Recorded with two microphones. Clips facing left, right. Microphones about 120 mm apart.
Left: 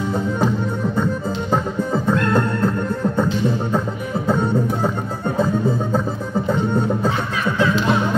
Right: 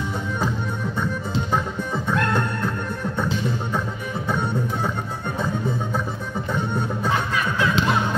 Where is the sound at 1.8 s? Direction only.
35° left (ahead or behind).